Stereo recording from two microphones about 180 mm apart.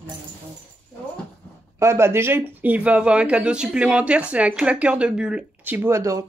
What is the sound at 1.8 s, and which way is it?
Speech, 15° right (ahead or behind).